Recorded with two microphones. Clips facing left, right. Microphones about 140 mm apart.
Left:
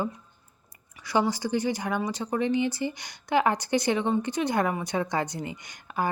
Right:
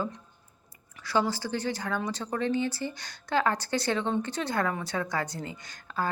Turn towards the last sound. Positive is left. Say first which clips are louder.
# left 2 dB
turn(degrees=15)  # may be behind; listen again after turning